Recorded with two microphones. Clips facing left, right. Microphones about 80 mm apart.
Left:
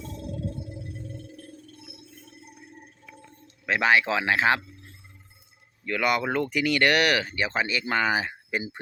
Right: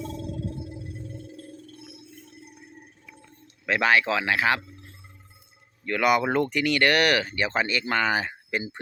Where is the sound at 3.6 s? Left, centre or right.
Centre.